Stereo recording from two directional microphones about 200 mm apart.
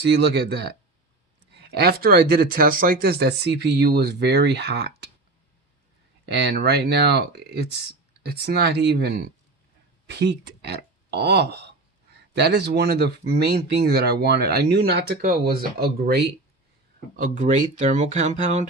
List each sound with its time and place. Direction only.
0.0 s speech: 55° right (ahead or behind)
6.2 s speech: 55° right (ahead or behind)
17.2 s speech: 40° right (ahead or behind)